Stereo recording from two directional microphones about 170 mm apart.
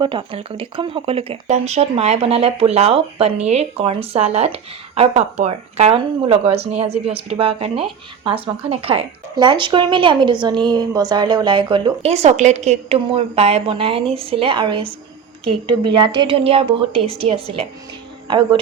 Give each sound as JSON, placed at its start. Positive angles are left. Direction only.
{"t": 0.0, "sound": "speech", "side_deg": -30}